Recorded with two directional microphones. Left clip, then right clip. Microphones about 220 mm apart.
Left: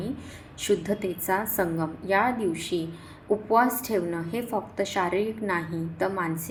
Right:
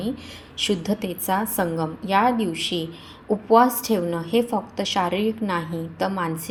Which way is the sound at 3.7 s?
25° right (ahead or behind).